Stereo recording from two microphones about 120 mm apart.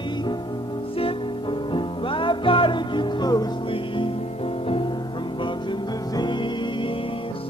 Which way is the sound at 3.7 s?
45° left (ahead or behind).